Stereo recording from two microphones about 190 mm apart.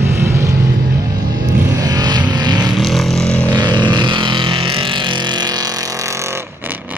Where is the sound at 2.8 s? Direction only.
Centre (ahead or behind).